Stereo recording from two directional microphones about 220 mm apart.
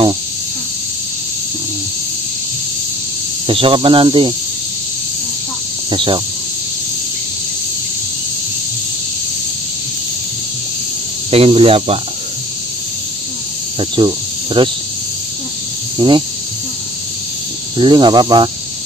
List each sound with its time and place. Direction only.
3.4 s speech: 25° right (ahead or behind)
5.9 s speech: 25° right (ahead or behind)
11.2 s speech: 25° right (ahead or behind)
13.7 s speech: 20° right (ahead or behind)
16.0 s speech: 20° right (ahead or behind)
17.7 s speech: 20° right (ahead or behind)